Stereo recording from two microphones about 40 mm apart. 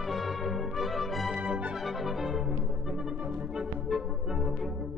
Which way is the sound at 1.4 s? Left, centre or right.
Right.